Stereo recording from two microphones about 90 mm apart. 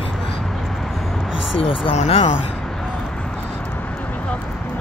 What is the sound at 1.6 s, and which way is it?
Speech, 90° left.